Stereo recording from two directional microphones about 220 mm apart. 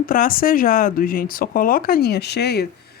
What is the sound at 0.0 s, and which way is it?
Speech, 40° left (ahead or behind).